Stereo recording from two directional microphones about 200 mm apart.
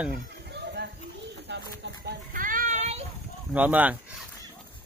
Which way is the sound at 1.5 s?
60° right (ahead or behind).